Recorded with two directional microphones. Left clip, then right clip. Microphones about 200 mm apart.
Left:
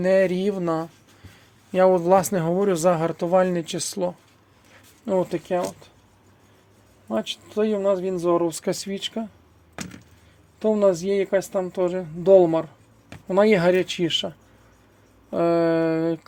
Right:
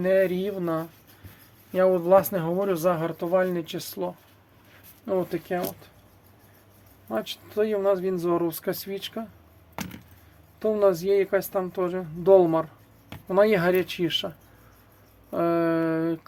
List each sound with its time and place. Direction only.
0.0 s speech: 40° left (ahead or behind)
5.0 s speech: 30° left (ahead or behind)
7.1 s speech: 25° left (ahead or behind)
9.8 s chop: 10° right (ahead or behind)
10.6 s speech: 25° left (ahead or behind)